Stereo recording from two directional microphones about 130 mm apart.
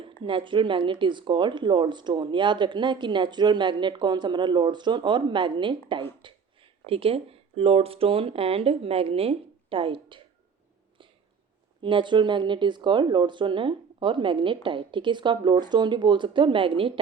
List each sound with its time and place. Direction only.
0.3 s speech: 40° right (ahead or behind)
11.8 s speech: 40° right (ahead or behind)